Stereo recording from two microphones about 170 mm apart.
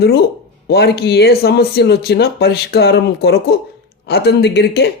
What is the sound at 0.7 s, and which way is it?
Speech, 70° left (ahead or behind).